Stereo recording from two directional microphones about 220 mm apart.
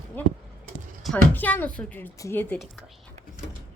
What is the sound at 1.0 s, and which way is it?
Speech, 5° left (ahead or behind).